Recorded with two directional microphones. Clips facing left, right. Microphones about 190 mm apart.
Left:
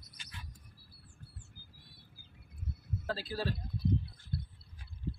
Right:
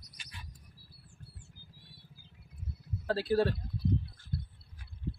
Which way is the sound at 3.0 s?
65° right (ahead or behind).